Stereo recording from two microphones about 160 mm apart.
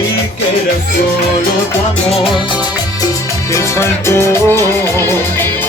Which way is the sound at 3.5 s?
15° left (ahead or behind).